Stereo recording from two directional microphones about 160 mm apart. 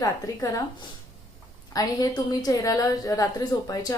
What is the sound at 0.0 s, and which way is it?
Speech, 20° left (ahead or behind).